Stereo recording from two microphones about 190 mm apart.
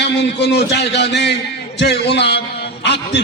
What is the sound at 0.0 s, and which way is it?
A man's voice, 65° left (ahead or behind).